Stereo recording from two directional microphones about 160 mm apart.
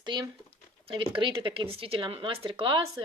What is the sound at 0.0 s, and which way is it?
Speech, 30° right (ahead or behind).